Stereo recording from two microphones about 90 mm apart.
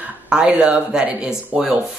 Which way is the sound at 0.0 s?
10° right (ahead or behind).